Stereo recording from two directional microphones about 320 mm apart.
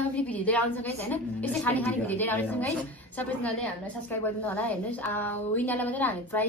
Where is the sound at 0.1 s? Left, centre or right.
Centre.